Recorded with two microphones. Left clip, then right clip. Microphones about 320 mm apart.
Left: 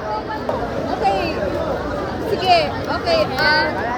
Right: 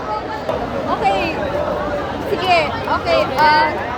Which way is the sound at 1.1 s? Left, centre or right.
Right.